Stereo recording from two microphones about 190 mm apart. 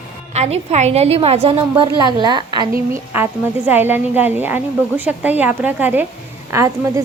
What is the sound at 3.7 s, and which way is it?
A woman's voice, 10° right (ahead or behind).